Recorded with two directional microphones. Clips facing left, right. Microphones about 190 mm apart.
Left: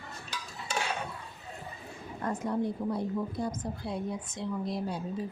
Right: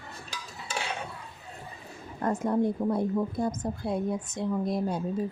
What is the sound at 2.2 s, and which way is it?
A woman's voice, 50° right (ahead or behind).